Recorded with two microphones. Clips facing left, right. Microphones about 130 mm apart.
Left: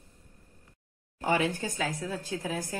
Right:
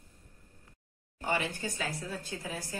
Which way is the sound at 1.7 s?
90° left.